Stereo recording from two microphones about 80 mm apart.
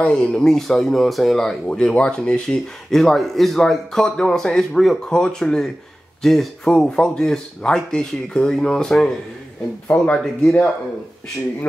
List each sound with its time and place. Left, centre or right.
0.0 s speech: centre